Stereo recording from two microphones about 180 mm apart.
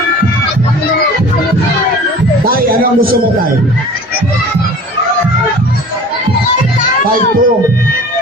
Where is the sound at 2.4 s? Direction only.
55° right (ahead or behind).